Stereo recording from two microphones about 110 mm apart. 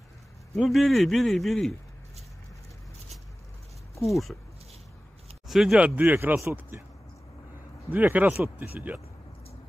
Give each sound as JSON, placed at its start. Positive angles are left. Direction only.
{"t": 0.6, "sound": "a man's voice", "side_deg": 0}
{"t": 3.9, "sound": "a sound", "side_deg": 30}
{"t": 5.5, "sound": "speech", "side_deg": -5}
{"t": 7.9, "sound": "speech", "side_deg": -15}